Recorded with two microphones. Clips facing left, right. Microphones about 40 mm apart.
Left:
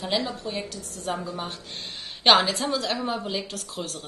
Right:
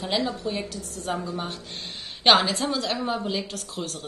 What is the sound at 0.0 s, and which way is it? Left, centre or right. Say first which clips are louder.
A woman's voice: right 1 dB; centre.